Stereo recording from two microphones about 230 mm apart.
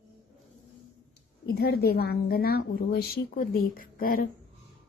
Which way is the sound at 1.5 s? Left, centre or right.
Left.